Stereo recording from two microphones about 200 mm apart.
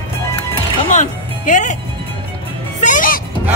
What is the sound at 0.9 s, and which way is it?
Speech, 40° left (ahead or behind).